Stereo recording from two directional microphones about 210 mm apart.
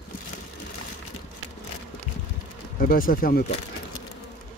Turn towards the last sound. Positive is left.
turn(degrees=45)  # may be behind; listen again after turning